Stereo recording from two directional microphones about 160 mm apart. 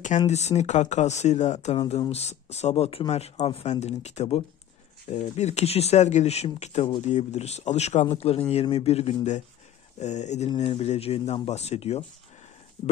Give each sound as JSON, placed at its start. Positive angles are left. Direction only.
{"t": 0.3, "sound": "speech", "side_deg": 45}